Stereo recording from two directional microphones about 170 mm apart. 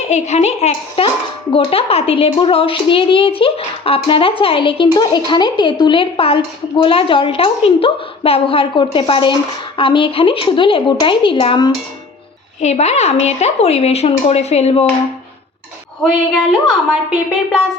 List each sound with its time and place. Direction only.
0.1 s a woman's voice: 40° left (ahead or behind)
12.5 s a woman's voice: 40° left (ahead or behind)
16.5 s a woman's voice: centre (ahead or behind)